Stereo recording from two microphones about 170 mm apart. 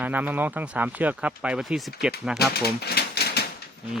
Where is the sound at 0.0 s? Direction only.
10° right (ahead or behind).